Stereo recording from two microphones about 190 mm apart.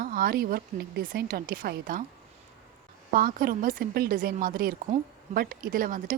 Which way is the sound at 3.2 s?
50° right (ahead or behind).